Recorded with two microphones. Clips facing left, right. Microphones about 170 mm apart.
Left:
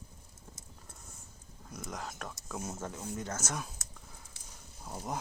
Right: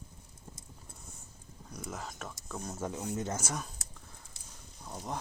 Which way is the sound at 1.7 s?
Centre (ahead or behind).